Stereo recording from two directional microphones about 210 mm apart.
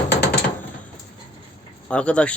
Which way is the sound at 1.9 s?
5° left (ahead or behind).